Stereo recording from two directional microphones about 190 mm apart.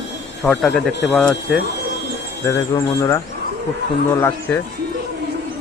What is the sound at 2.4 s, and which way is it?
Speech, 15° left (ahead or behind).